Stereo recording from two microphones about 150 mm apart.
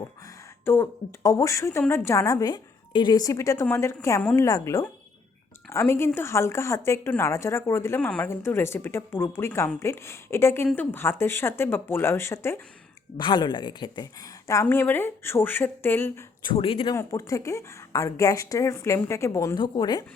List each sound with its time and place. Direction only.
0.6 s a woman's voice: 15° left (ahead or behind)
13.1 s a woman's voice: 30° left (ahead or behind); by 16.1 s 15° left (ahead or behind)
16.4 s speech: 35° left (ahead or behind)
16.9 s a woman's voice: 20° left (ahead or behind)